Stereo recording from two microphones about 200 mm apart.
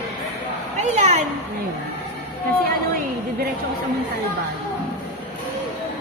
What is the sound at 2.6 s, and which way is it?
Speech, 50° right (ahead or behind).